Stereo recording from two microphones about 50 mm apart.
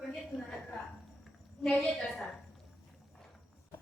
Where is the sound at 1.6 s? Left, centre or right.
Centre.